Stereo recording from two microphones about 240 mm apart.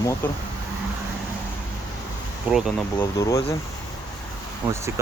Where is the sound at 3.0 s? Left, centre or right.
Centre.